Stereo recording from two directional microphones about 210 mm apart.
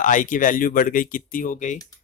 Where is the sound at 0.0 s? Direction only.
40° left (ahead or behind).